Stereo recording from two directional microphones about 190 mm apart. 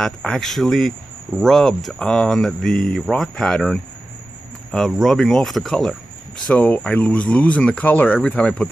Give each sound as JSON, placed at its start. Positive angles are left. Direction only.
{"t": 0.0, "sound": "speech", "side_deg": 5}